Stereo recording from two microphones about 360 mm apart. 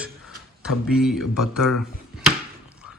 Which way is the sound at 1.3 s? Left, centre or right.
Left.